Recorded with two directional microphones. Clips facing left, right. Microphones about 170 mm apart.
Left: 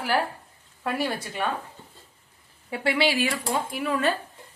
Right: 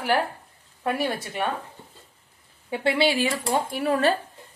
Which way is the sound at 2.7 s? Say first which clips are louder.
Right 2 dB; 25° right (ahead or behind).